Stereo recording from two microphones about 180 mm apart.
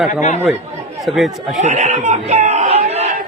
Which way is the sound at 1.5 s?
40° right (ahead or behind).